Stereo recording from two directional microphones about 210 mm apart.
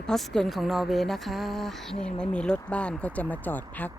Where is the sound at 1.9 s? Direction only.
30° left (ahead or behind).